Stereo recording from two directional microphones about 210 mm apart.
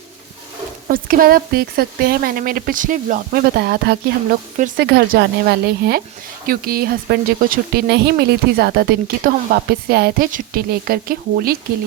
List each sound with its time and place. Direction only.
0.9 s speech: 40° right (ahead or behind)
4.5 s speech: 35° right (ahead or behind)
4.9 s speech: 50° right (ahead or behind)